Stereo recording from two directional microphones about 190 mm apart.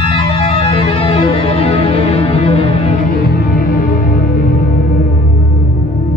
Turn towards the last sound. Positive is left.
turn(degrees=50)  # may be behind; listen again after turning